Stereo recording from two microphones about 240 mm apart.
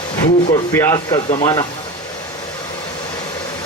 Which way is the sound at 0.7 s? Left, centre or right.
Centre.